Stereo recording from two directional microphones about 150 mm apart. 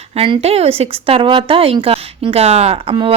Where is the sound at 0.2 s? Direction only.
40° right (ahead or behind).